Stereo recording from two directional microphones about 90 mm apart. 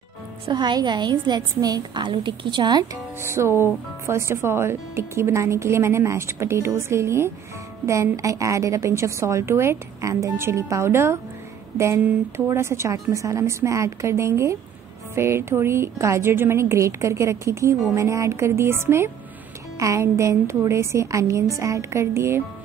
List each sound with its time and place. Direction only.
0.5 s a woman's voice: 55° right (ahead or behind)
3.2 s music: 30° right (ahead or behind)
4.1 s a woman's voice: 30° right (ahead or behind)
12.4 s a woman's voice: 30° right (ahead or behind)